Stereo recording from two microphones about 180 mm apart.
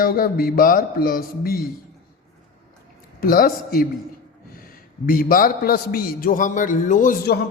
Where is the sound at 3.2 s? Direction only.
55° left (ahead or behind).